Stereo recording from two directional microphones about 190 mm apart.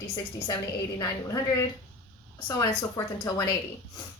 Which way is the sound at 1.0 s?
15° left (ahead or behind).